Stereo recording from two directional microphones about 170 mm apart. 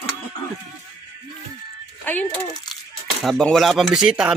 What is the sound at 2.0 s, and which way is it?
A child's voice, 10° left (ahead or behind).